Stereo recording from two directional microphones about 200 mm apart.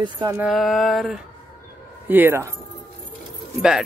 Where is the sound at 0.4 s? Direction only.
Centre (ahead or behind).